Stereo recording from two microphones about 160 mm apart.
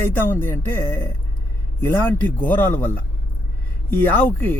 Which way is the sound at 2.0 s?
10° left (ahead or behind).